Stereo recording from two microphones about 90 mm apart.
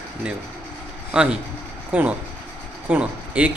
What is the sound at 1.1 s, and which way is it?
A man's voice, 15° right (ahead or behind).